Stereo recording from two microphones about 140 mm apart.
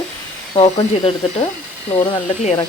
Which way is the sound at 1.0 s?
45° left (ahead or behind).